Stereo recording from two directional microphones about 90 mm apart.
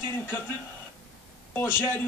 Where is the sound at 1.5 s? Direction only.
25° left (ahead or behind).